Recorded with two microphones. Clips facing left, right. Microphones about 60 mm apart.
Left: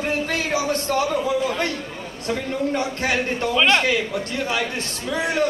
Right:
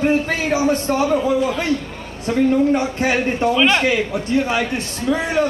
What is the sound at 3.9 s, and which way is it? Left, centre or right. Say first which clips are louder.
A man's voice: right 5 dB; centre.